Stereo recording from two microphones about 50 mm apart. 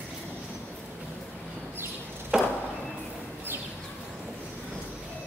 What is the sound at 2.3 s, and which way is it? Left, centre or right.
Chop, centre.